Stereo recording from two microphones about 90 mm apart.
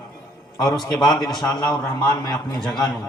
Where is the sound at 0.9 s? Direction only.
10° left (ahead or behind).